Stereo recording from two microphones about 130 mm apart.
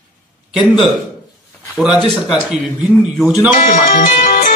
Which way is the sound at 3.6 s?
90° left.